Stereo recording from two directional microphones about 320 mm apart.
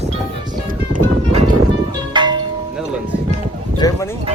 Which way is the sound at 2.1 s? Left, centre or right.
Centre.